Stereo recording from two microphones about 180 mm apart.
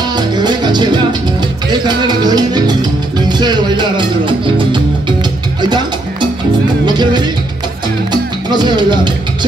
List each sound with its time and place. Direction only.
0.1 s music: 25° right (ahead or behind)
6.9 s music: 25° right (ahead or behind)